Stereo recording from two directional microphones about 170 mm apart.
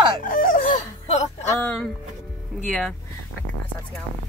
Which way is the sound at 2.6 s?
5° left (ahead or behind).